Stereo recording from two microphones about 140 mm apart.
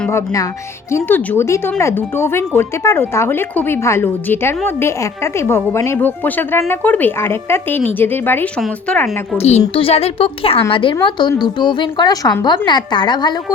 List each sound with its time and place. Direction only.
0.1 s a woman's voice: 20° left (ahead or behind)
9.4 s a woman's voice: 50° left (ahead or behind); by 13.4 s 30° left (ahead or behind)